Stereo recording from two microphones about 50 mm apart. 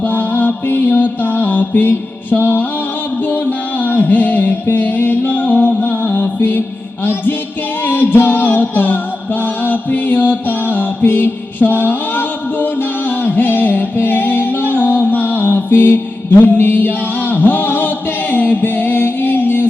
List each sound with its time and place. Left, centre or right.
0.0 s mantra: left
3.2 s music: left
16.4 s chant: left